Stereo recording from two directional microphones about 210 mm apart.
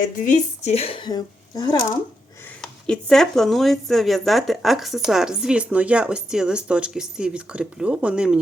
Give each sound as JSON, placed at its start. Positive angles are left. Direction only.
{"t": 0.0, "sound": "a woman's voice", "side_deg": 35}
{"t": 2.6, "sound": "speech", "side_deg": 5}